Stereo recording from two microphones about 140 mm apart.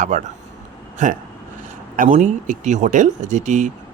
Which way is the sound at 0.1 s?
55° right (ahead or behind).